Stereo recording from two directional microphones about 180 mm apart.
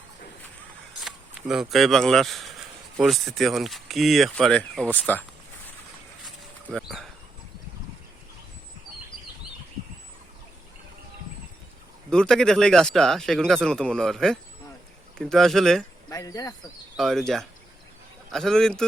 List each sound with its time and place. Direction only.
1.0 s speech: 5° right (ahead or behind)
6.2 s a sound: centre (ahead or behind)
12.1 s speech: 5° left (ahead or behind)
16.0 s speech: 20° left (ahead or behind)
17.0 s speech: centre (ahead or behind)